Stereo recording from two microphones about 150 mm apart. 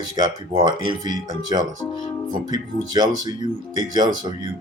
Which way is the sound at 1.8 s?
20° left (ahead or behind).